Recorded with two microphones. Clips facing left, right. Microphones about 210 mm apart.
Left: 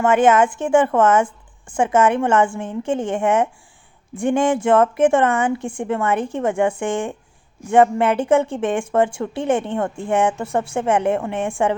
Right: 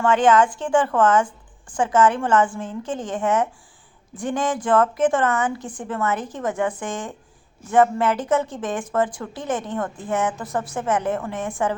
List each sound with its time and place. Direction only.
0.3 s speech: 25° left (ahead or behind)